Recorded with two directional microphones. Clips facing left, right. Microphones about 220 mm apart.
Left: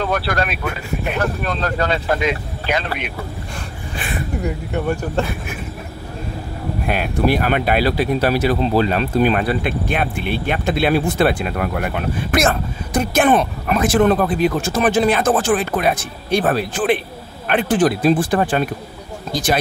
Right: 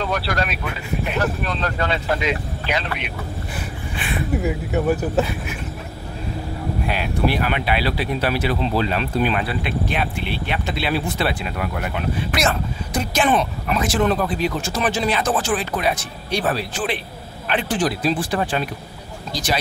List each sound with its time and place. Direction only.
0.0 s speech: 50° left (ahead or behind)
4.4 s speech: 5° right (ahead or behind)
6.9 s speech: 50° left (ahead or behind)